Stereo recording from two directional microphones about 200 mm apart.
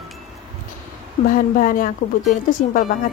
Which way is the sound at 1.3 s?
45° left (ahead or behind).